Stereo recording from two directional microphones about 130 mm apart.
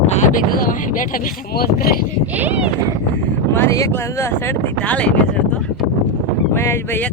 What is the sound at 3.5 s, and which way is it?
Speech, 20° left (ahead or behind).